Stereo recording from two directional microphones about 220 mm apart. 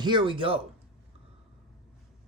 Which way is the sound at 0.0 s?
20° right (ahead or behind).